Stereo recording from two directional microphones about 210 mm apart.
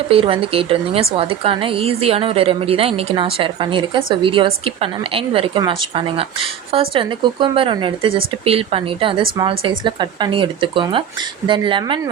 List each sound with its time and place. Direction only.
0.1 s a woman's voice: 25° right (ahead or behind)